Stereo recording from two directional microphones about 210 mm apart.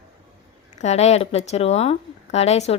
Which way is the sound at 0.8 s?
30° left (ahead or behind).